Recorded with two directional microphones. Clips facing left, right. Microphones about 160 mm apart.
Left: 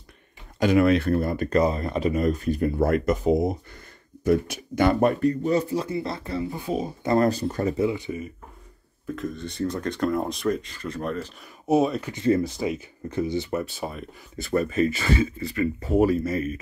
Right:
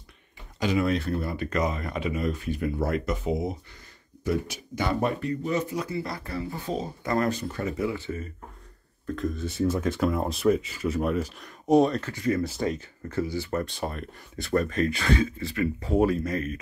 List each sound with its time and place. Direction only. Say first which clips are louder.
0.6 s speech: left 6 dB; 55° left (ahead or behind)
1.6 s speech: left 6 dB; 30° left (ahead or behind); by 5.3 s 55° left (ahead or behind)
5.4 s speech: left 5 dB; 35° left (ahead or behind); by 6.9 s 10° left (ahead or behind)
7.1 s speech: left 5 dB; 35° left (ahead or behind)
7.8 s speech: left 4 dB; 15° left (ahead or behind)
9.0 s speech: right 1 dB; centre (ahead or behind)
11.6 s speech: right 1 dB; 5° left (ahead or behind)
12.1 s speech: left 4 dB; 20° left (ahead or behind)
13.5 s speech: left 1 dB; 5° left (ahead or behind)